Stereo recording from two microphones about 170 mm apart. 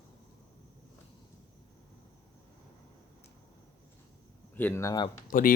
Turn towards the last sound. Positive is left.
turn(degrees=55)  # may be behind; listen again after turning